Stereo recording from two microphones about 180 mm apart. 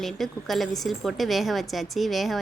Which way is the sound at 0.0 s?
Centre (ahead or behind).